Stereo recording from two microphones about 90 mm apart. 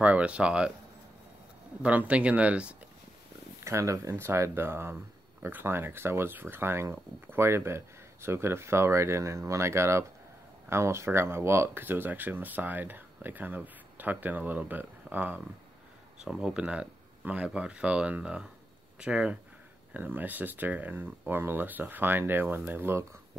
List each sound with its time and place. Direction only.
0.0 s speech: 15° right (ahead or behind)
1.8 s speech: 15° right (ahead or behind)
3.6 s speech: 35° right (ahead or behind)
16.3 s speech: 10° right (ahead or behind); by 23.0 s 25° right (ahead or behind)